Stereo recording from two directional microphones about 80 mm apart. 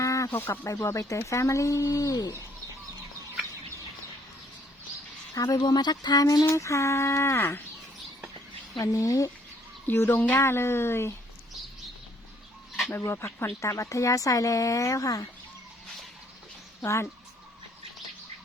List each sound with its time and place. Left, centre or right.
0.0 s a sound: left
0.3 s speech: left
0.7 s speech: left
5.3 s speech: left
6.5 s speech: left
8.8 s speech: left
9.8 s speech: left
13.1 s speech: left
16.8 s speech: left